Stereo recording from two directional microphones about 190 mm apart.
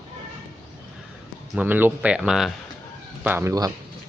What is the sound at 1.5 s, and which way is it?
Speech, 10° right (ahead or behind).